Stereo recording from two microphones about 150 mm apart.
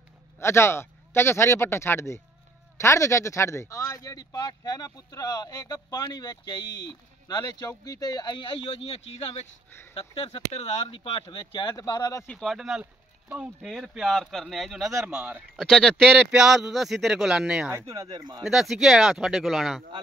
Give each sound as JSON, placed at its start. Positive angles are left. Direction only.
{"t": 0.4, "sound": "a man's voice", "side_deg": 15}
{"t": 10.9, "sound": "speech", "side_deg": 40}
{"t": 12.3, "sound": "a man's voice", "side_deg": 0}
{"t": 15.1, "sound": "speech", "side_deg": -15}
{"t": 15.5, "sound": "a man's voice", "side_deg": 0}
{"t": 17.6, "sound": "speech", "side_deg": -20}
{"t": 18.4, "sound": "a man's voice", "side_deg": 0}